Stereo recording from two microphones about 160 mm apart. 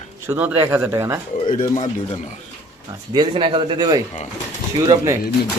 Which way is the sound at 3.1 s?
30° right (ahead or behind).